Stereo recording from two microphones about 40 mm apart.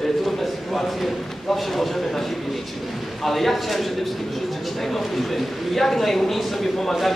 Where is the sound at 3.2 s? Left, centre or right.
Centre.